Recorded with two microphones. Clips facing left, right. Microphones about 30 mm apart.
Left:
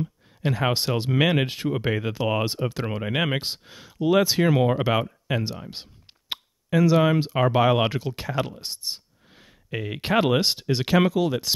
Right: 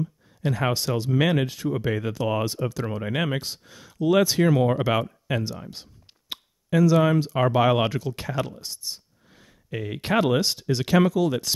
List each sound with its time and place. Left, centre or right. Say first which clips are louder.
0.0 s a sound: even; left
0.7 s speech: left 1 dB; left
1.9 s speech: left 1 dB; left
2.7 s speech: even; left
3.0 s speech: left 2 dB; left
3.3 s speech: left 2 dB; left; by 5.4 s centre
5.7 s a sound: left 2 dB; left
6.8 s speech: even; left
7.6 s speech: even; centre
7.9 s speech: even; left
8.2 s speech: left 1 dB; centre
8.5 s speech: left 3 dB; left; by 11.3 s centre